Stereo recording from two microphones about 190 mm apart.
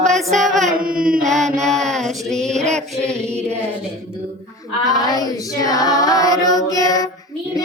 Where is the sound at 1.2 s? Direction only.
Centre (ahead or behind).